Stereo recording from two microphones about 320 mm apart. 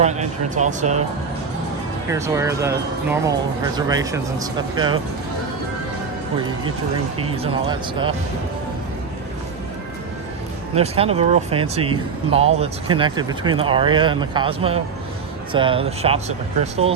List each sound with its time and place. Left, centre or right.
0.0 s speech: right
2.0 s speech: centre
7.4 s speech: centre
10.8 s speech: centre